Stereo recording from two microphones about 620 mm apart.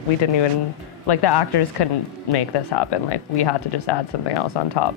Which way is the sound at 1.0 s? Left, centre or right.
Left.